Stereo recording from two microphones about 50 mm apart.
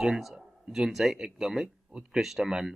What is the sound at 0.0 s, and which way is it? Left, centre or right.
Speech, centre.